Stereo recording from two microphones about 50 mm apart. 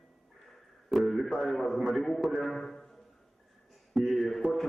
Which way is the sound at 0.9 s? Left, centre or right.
Centre.